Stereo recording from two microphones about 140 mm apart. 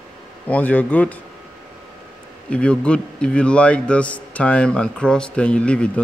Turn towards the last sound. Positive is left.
turn(degrees=5)  # may be behind; listen again after turning